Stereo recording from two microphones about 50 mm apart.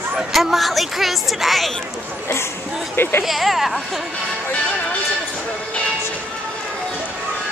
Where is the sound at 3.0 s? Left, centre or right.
Left.